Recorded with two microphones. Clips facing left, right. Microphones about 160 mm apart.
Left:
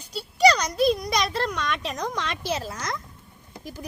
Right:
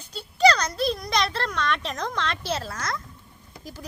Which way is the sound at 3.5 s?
15° left (ahead or behind).